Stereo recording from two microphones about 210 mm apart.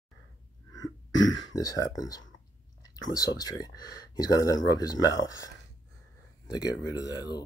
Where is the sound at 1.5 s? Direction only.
15° left (ahead or behind).